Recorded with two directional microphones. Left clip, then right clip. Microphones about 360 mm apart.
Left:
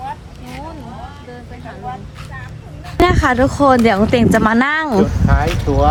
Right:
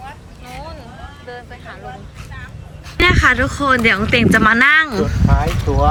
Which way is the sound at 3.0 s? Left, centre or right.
Centre.